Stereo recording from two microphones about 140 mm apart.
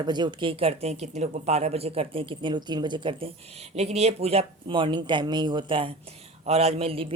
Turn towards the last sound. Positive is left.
turn(degrees=-45)  # may be behind; listen again after turning